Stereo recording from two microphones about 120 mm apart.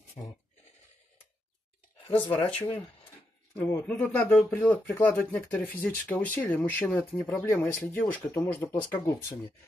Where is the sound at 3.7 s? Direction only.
15° left (ahead or behind).